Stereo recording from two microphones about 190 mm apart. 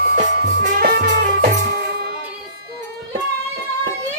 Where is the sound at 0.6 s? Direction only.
45° right (ahead or behind).